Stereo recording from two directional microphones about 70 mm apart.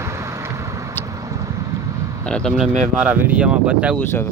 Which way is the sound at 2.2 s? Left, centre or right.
Centre.